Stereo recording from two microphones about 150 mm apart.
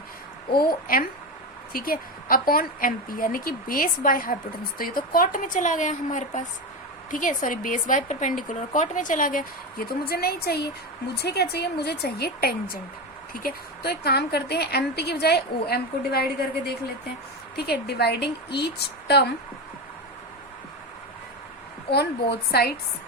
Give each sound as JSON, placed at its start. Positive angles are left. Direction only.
{"t": 0.9, "sound": "a woman's voice", "side_deg": 75}
{"t": 21.9, "sound": "a woman's voice", "side_deg": 35}
{"t": 22.5, "sound": "a woman's voice", "side_deg": 90}